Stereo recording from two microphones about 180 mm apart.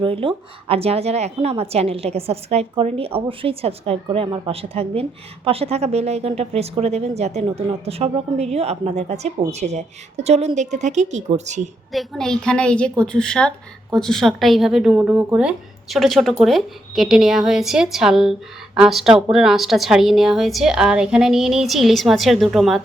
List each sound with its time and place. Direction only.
0.0 s a woman's voice: 30° right (ahead or behind)
11.9 s a woman's voice: centre (ahead or behind)